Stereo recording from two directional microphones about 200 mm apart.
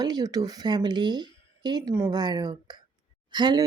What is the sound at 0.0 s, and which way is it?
Speech, 20° right (ahead or behind).